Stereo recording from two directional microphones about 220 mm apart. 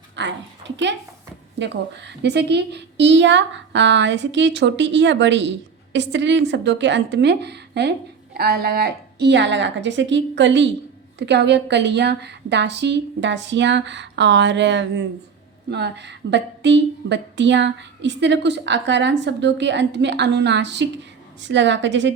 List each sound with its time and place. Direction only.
0.2 s a woman's voice: 55° right (ahead or behind)